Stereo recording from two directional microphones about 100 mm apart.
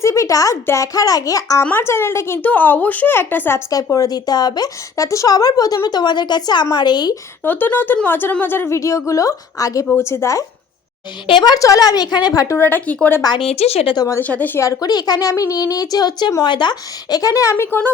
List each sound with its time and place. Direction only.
0.0 s a woman's voice: 30° left (ahead or behind)
1.6 s speech: 20° left (ahead or behind)
3.9 s a woman's voice: 40° left (ahead or behind)
7.4 s speech: 20° left (ahead or behind)
11.3 s a woman's voice: 45° left (ahead or behind)
12.5 s speech: 20° left (ahead or behind)
13.4 s speech: 90° left
13.9 s a woman's voice: 40° left (ahead or behind)
14.2 s speech: 15° left (ahead or behind)
14.6 s a woman's voice: 35° left (ahead or behind); by 17.9 s 20° left (ahead or behind)